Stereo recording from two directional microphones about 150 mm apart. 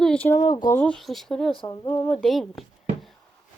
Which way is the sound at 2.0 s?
5° left (ahead or behind).